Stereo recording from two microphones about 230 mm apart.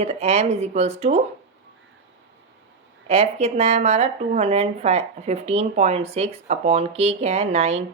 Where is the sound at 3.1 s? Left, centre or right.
Right.